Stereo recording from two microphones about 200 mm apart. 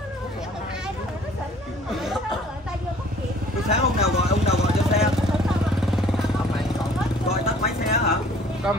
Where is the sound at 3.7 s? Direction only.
30° left (ahead or behind).